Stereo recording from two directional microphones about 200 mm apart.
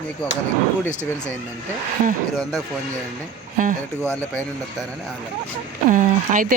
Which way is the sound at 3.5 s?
40° right (ahead or behind).